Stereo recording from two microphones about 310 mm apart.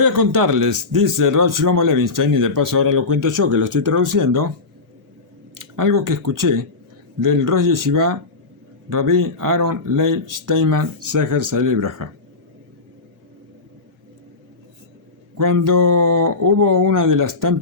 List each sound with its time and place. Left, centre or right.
0.0 s speech: right
3.2 s speech: right
5.5 s speech: right
15.4 s speech: right